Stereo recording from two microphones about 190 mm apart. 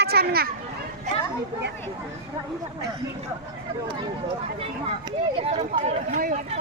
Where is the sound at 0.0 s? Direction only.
55° right (ahead or behind).